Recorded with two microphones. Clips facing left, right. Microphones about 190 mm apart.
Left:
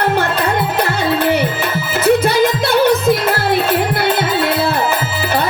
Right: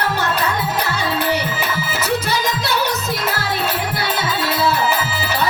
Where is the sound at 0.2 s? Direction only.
55° left (ahead or behind).